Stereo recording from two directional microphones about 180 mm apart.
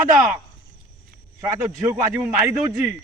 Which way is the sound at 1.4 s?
15° right (ahead or behind).